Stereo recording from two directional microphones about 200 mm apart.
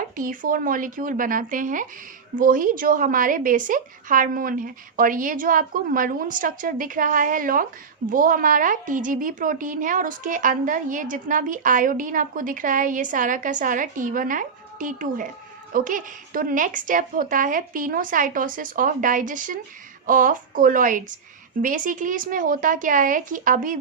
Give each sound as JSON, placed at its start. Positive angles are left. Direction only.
{"t": 0.0, "sound": "a woman's voice", "side_deg": -45}